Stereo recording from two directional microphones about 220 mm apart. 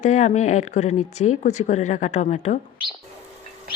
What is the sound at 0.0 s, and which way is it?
Speech, 35° left (ahead or behind).